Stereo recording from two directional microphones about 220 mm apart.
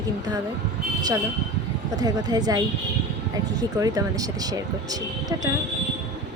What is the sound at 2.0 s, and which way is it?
A woman's voice, 20° right (ahead or behind).